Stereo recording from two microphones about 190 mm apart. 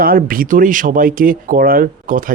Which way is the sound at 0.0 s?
50° right (ahead or behind).